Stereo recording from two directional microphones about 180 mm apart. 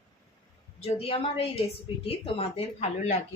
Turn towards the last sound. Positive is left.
turn(degrees=35)  # may be behind; listen again after turning